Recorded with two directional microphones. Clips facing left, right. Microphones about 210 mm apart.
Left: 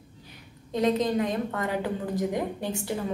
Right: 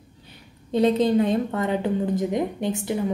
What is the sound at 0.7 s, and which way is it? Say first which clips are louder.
Speech: right 5 dB; 30° right (ahead or behind).